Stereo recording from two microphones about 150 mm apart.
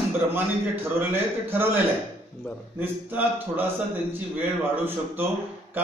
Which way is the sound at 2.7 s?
15° right (ahead or behind).